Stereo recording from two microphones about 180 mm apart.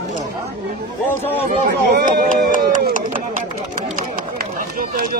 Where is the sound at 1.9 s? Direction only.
45° right (ahead or behind).